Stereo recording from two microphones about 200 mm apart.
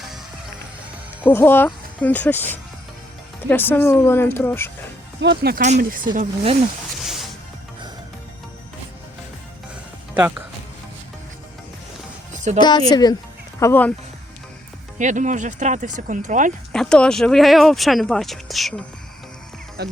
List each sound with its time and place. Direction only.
1.2 s speech: 10° left (ahead or behind)
5.2 s speech: 55° right (ahead or behind)
5.6 s speech: 40° right (ahead or behind)
7.0 s music: centre (ahead or behind)
10.2 s speech: 10° right (ahead or behind)
12.3 s music: 35° right (ahead or behind)
12.5 s a woman's voice: 20° left (ahead or behind)
14.9 s speech: 40° right (ahead or behind)
16.7 s speech: 5° left (ahead or behind)
19.8 s speech: 55° right (ahead or behind)